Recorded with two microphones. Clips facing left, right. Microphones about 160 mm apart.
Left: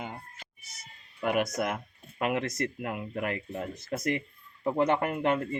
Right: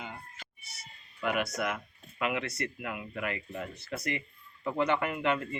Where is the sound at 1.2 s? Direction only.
45° left (ahead or behind).